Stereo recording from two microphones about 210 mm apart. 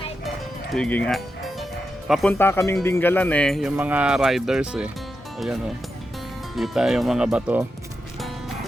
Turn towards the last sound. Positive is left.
turn(degrees=-5)  # may be behind; listen again after turning